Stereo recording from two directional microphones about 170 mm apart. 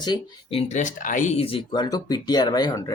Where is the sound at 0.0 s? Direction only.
30° left (ahead or behind).